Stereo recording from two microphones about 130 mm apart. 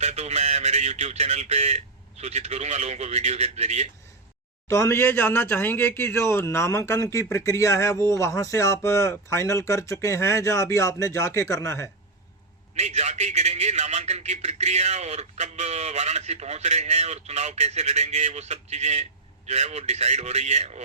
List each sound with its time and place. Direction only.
0.0 s a sound: 60° right (ahead or behind)
4.7 s speech: 20° left (ahead or behind)
12.7 s a man's voice: 60° right (ahead or behind)